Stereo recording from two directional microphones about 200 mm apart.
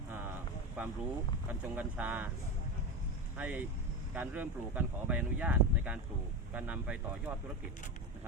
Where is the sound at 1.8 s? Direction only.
10° right (ahead or behind).